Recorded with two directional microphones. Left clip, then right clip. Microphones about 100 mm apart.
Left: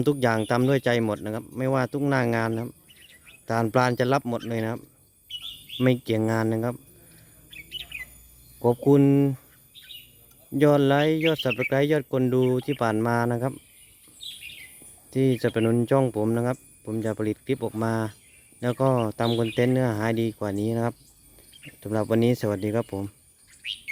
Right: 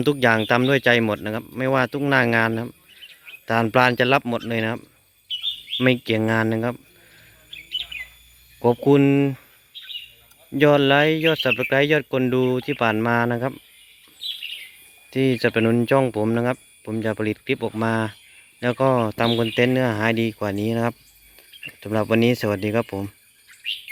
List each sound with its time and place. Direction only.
0.0 s speech: 25° left (ahead or behind)
7.9 s bird: 25° right (ahead or behind)
8.8 s speech: 15° left (ahead or behind)
10.6 s speech: 25° left (ahead or behind)
15.1 s speech: 25° left (ahead or behind)
22.1 s speech: 25° left (ahead or behind)